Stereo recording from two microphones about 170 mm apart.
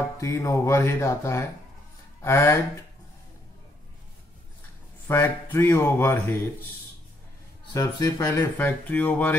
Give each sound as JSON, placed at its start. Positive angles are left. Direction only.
{"t": 0.2, "sound": "speech", "side_deg": 15}
{"t": 5.0, "sound": "speech", "side_deg": 15}
{"t": 7.7, "sound": "speech", "side_deg": 20}
{"t": 8.5, "sound": "speech", "side_deg": 10}